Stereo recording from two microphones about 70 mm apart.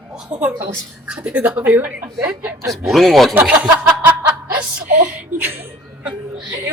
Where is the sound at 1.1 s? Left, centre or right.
Centre.